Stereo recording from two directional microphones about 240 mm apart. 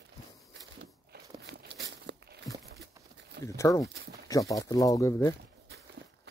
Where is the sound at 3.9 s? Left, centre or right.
Right.